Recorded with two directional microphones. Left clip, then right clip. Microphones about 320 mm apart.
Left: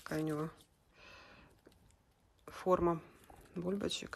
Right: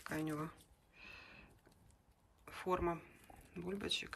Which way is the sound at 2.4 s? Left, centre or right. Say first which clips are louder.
Left 6 dB; centre.